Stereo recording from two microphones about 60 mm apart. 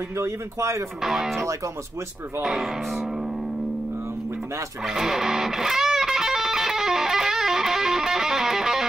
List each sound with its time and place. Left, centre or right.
0.2 s speech: right
1.0 s speech: centre
4.8 s music: centre